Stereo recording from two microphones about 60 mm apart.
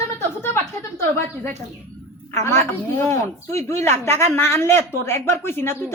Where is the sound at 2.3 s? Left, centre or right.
Left.